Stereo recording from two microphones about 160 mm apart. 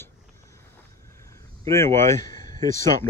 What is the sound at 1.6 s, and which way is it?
Speech, 15° left (ahead or behind).